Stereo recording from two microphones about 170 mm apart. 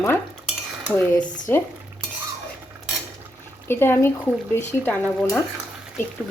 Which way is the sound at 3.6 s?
15° left (ahead or behind).